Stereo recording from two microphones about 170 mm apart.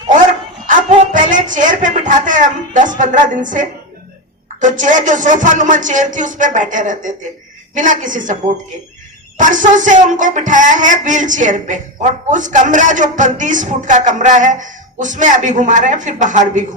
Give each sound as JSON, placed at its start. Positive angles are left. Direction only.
{"t": 1.1, "sound": "a man's voice", "side_deg": -50}
{"t": 9.4, "sound": "a man's voice", "side_deg": -50}